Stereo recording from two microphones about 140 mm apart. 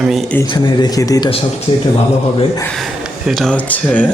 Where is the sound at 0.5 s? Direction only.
30° left (ahead or behind).